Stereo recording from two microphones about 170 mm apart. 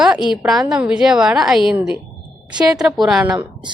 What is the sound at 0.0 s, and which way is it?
A woman's voice, 5° right (ahead or behind).